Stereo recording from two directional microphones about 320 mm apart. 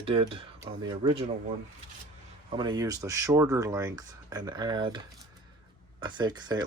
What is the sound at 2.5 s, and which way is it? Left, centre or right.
Speech, centre.